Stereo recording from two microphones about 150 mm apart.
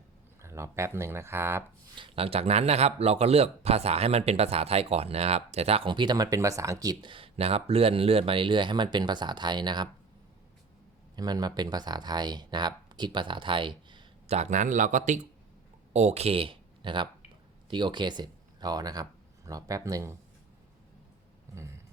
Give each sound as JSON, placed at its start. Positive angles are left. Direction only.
{"t": 0.4, "sound": "speech", "side_deg": -20}
{"t": 2.0, "sound": "speech", "side_deg": -35}
{"t": 11.2, "sound": "speech", "side_deg": -25}
{"t": 14.3, "sound": "speech", "side_deg": -50}